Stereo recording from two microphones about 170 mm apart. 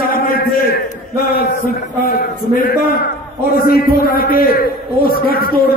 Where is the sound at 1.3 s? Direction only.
65° left (ahead or behind).